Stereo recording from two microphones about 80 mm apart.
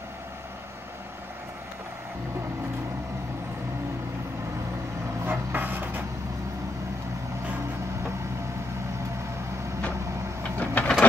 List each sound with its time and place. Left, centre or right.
5.2 s vehicle: right
10.6 s vehicle: centre